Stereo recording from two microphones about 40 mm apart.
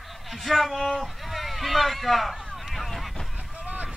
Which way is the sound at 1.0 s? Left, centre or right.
Centre.